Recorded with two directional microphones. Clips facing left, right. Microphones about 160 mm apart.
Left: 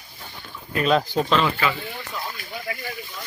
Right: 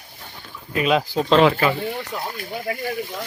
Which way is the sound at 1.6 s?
50° right (ahead or behind).